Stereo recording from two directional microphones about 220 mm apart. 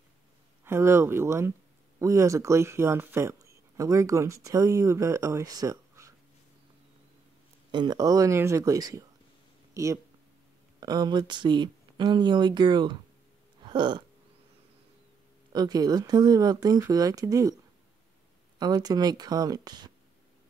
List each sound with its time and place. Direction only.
0.7 s speech: 10° right (ahead or behind)
7.7 s speech: 20° right (ahead or behind)
10.8 s speech: 20° right (ahead or behind)
13.7 s a sound: 20° right (ahead or behind)
15.5 s speech: 15° right (ahead or behind)
18.6 s speech: 20° right (ahead or behind)